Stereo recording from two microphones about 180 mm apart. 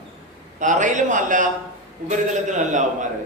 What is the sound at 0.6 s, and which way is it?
A man's voice, 45° right (ahead or behind).